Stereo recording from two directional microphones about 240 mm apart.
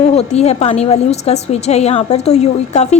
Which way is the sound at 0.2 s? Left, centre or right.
Left.